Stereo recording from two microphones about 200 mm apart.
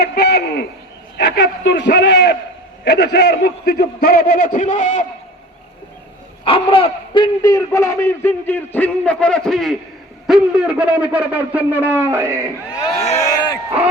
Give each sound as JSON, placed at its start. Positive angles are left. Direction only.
{"t": 0.0, "sound": "a sound", "side_deg": 55}
{"t": 1.2, "sound": "a man's voice", "side_deg": 60}
{"t": 6.4, "sound": "a man's voice", "side_deg": 25}
{"t": 13.1, "sound": "speech", "side_deg": 15}